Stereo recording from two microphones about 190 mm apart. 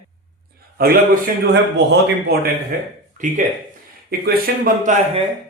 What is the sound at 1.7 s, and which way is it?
Speech, 65° right (ahead or behind).